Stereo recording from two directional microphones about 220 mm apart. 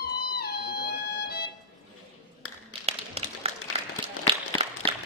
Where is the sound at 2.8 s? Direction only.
30° right (ahead or behind).